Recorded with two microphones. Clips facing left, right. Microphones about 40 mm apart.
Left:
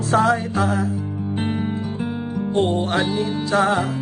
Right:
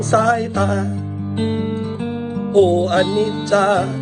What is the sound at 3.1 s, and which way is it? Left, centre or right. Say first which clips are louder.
Music: right 5 dB; right.